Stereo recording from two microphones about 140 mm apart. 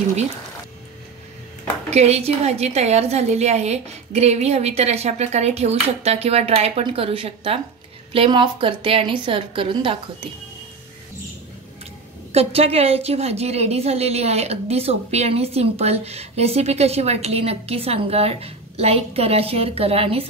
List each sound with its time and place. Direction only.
1.9 s a woman's voice: 50° right (ahead or behind)
12.3 s a woman's voice: 45° right (ahead or behind)